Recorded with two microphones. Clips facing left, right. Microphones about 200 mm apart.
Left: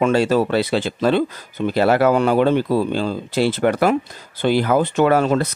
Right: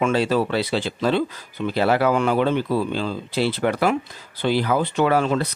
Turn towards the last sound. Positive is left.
turn(degrees=45)  # may be behind; listen again after turning